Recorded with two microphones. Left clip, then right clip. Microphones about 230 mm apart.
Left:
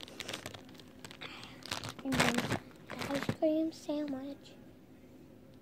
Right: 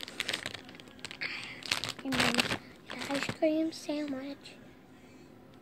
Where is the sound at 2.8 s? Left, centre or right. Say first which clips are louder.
Right 3 dB; centre.